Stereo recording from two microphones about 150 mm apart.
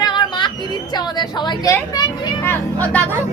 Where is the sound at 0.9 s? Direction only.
30° left (ahead or behind).